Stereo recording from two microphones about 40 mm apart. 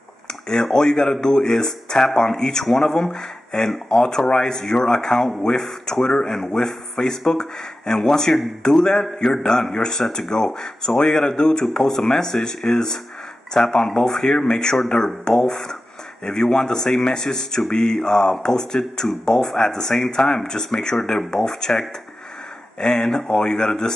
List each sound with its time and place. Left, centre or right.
0.3 s speech: centre
11.6 s speech: centre